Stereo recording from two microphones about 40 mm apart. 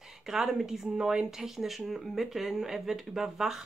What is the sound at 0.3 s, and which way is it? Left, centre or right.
Speech, centre.